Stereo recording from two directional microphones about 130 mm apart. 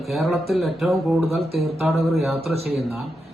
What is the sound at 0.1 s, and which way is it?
Speech, centre (ahead or behind).